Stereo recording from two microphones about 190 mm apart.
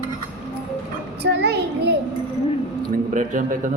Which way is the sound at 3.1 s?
45° right (ahead or behind).